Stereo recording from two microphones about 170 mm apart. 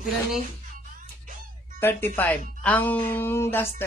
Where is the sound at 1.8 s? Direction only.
15° left (ahead or behind).